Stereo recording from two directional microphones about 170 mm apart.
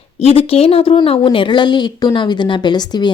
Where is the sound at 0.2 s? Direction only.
35° left (ahead or behind).